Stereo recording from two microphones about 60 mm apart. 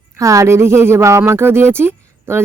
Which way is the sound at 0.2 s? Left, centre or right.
Right.